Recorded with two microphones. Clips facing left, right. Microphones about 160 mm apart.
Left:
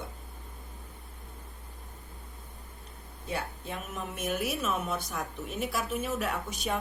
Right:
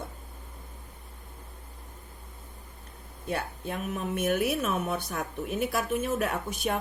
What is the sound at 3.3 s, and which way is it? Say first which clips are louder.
Speech: right 3 dB; 55° right (ahead or behind).